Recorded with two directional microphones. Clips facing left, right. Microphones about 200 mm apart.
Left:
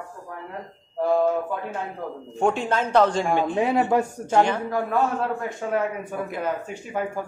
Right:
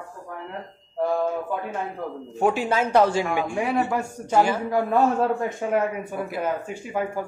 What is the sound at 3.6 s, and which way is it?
Speech, 20° left (ahead or behind).